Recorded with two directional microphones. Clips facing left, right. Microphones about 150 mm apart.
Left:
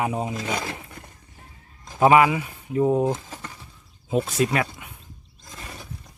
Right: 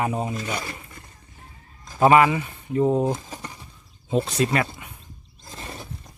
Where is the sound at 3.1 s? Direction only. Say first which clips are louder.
Even; 15° right (ahead or behind).